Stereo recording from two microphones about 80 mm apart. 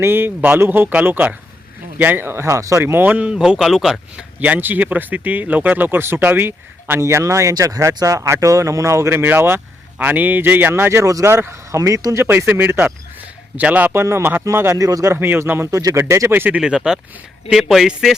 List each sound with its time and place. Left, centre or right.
0.0 s speech: right
2.8 s speech: right
3.3 s a man's voice: centre
4.2 s speech: centre; by 11.3 s right
11.3 s speech: right
11.8 s speech: right
12.4 s speech: right
14.8 s speech: right
15.1 s speech: right
16.3 s speech: right
16.6 s a man's voice: centre